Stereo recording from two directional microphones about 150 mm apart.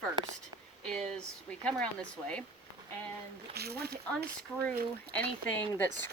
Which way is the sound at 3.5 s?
90° right.